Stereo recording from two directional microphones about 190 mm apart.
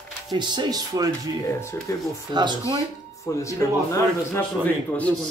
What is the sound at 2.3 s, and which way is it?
Speech, 25° right (ahead or behind).